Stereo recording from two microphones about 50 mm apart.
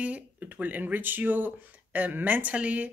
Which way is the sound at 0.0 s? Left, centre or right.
Right.